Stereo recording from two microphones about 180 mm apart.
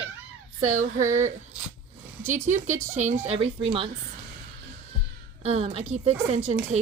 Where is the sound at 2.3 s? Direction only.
40° right (ahead or behind).